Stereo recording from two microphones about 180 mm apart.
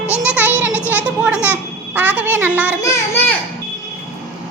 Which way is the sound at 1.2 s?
10° right (ahead or behind).